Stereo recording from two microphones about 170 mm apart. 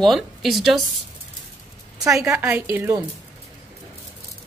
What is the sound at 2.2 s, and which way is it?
Speech, 15° right (ahead or behind).